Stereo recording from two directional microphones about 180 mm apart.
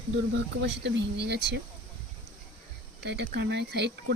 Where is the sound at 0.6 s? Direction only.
75° right (ahead or behind).